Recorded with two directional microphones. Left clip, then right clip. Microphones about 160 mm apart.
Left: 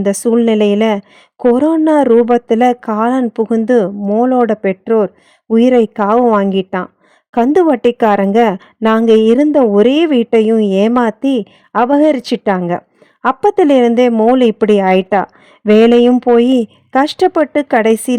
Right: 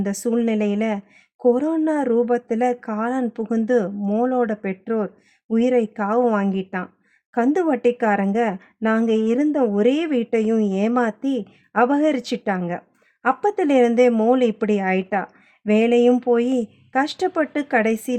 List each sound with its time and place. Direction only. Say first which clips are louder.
0.0 s a woman's voice: left 10 dB; 45° left (ahead or behind)
14.1 s a man's voice: left 7 dB; 30° left (ahead or behind)
14.3 s a woman's voice: left 10 dB; 45° left (ahead or behind)